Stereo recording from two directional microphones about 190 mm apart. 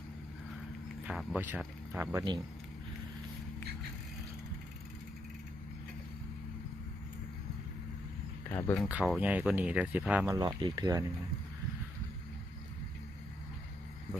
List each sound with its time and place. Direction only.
1.0 s speech: centre (ahead or behind)
8.4 s speech: 10° left (ahead or behind)
8.9 s speech: 5° right (ahead or behind)
10.2 s speech: 20° right (ahead or behind)